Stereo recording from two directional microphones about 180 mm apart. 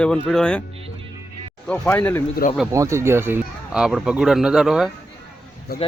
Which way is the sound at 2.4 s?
55° left (ahead or behind).